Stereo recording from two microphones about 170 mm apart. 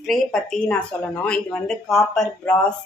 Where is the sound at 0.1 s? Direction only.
5° left (ahead or behind).